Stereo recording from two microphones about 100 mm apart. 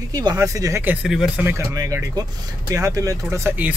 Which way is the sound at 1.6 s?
30° right (ahead or behind).